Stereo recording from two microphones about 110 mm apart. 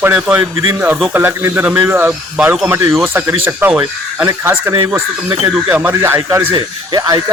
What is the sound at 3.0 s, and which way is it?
Speech, 20° right (ahead or behind).